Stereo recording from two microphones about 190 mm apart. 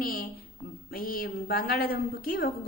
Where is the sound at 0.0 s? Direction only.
50° left (ahead or behind).